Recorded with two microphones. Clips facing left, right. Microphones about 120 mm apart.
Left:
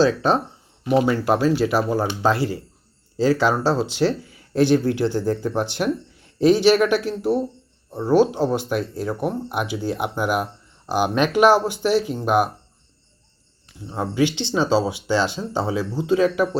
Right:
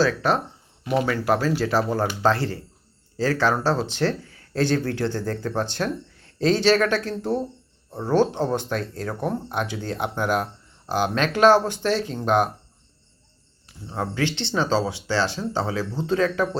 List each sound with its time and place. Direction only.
0.0 s speech: 20° left (ahead or behind)
13.9 s speech: 15° left (ahead or behind)